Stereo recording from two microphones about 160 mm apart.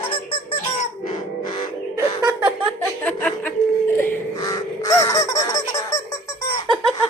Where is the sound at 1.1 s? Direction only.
30° left (ahead or behind).